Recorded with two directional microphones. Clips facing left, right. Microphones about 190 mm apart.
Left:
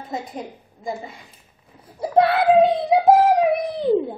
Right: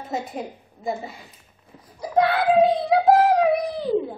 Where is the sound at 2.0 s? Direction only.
30° left (ahead or behind).